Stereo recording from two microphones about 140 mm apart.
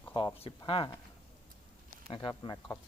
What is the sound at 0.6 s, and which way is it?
Speech, 35° left (ahead or behind).